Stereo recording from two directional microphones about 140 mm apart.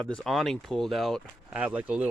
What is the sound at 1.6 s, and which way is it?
Speech, 10° right (ahead or behind).